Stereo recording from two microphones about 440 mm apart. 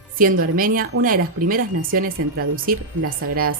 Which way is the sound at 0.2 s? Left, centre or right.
Centre.